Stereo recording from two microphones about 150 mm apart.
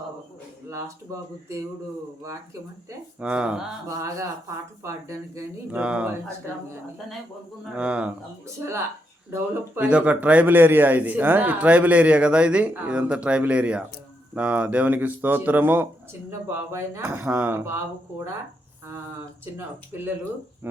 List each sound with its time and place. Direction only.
0.7 s speech: 20° right (ahead or behind)
3.2 s a man's voice: 5° right (ahead or behind)
3.8 s speech: 20° right (ahead or behind)
5.7 s a man's voice: 10° right (ahead or behind)
7.8 s a man's voice: 5° right (ahead or behind)
8.5 s a man's voice: 20° right (ahead or behind)
19.9 s a man's voice: 15° right (ahead or behind)